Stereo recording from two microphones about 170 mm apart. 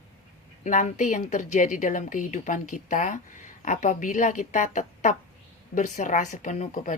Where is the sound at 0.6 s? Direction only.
50° left (ahead or behind).